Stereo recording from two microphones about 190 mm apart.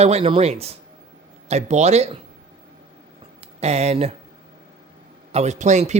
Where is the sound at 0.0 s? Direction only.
30° right (ahead or behind).